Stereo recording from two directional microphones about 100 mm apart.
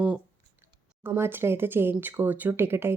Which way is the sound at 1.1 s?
25° right (ahead or behind).